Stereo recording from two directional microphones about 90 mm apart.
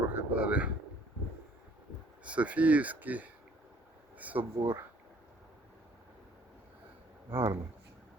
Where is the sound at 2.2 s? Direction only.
15° right (ahead or behind).